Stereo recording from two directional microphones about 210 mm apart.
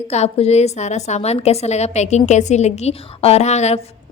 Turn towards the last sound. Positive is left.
turn(degrees=30)  # may be behind; listen again after turning